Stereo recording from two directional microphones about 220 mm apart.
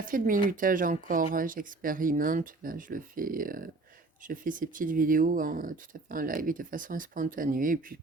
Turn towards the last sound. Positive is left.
turn(degrees=-40)  # may be behind; listen again after turning